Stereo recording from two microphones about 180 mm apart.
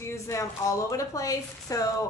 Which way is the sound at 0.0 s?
15° left (ahead or behind).